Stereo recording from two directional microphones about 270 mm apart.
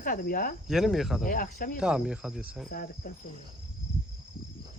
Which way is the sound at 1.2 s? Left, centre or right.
Left.